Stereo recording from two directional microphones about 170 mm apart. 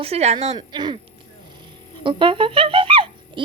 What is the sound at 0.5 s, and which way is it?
Speech, 25° right (ahead or behind).